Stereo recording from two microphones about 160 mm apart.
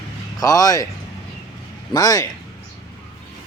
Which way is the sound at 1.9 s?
20° left (ahead or behind).